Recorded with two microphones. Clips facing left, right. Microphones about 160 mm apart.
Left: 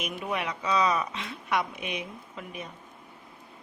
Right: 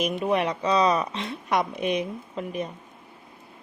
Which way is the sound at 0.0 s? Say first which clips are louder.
Right 8 dB; 35° right (ahead or behind).